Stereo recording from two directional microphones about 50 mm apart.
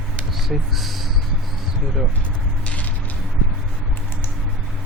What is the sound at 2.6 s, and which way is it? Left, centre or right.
Mechanisms, left.